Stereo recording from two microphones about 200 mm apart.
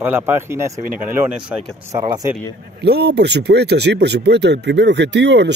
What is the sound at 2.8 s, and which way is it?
Speech, 55° right (ahead or behind).